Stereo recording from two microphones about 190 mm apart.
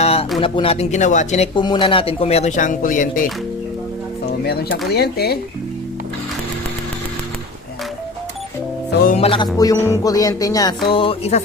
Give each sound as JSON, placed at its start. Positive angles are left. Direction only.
{"t": 0.0, "sound": "a sound", "side_deg": 30}
{"t": 0.3, "sound": "speech", "side_deg": 30}
{"t": 1.5, "sound": "speech", "side_deg": 25}
{"t": 4.9, "sound": "speech", "side_deg": 55}
{"t": 9.1, "sound": "music", "side_deg": 30}